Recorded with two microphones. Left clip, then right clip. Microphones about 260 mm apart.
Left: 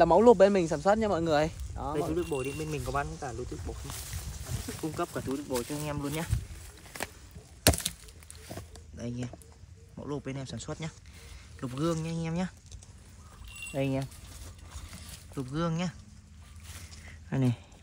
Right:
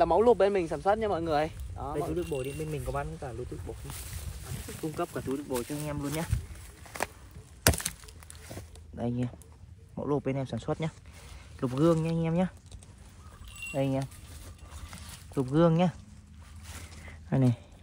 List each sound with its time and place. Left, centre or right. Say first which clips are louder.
0.0 s speech: left 3 dB; left
2.1 s speech: left 1 dB; centre
2.5 s speech: left 2 dB; centre
4.8 s speech: right 1 dB; centre
7.6 s wood: left 1 dB; centre
8.5 s a sound: left 2 dB; centre
10.0 s speech: right 7 dB; centre
13.6 s keys jangling: right 1 dB; centre
14.9 s a sound: right 4 dB; centre
17.3 s speech: right 3 dB; centre